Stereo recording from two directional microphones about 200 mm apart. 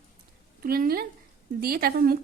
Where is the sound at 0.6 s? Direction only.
45° right (ahead or behind).